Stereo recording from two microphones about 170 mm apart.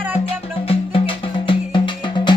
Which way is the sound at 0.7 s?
30° left (ahead or behind).